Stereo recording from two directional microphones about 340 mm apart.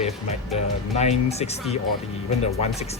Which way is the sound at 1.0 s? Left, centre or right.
Centre.